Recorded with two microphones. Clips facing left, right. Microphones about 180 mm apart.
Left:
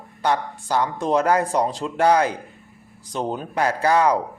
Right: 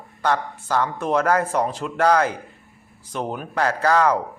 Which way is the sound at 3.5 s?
15° left (ahead or behind).